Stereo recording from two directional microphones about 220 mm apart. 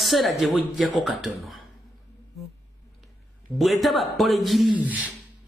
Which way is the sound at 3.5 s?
Centre (ahead or behind).